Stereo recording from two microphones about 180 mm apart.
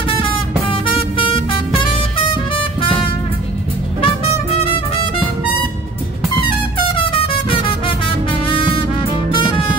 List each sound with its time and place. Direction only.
0.1 s music: 30° left (ahead or behind)
2.5 s music: 30° left (ahead or behind)
6.8 s music: 30° left (ahead or behind)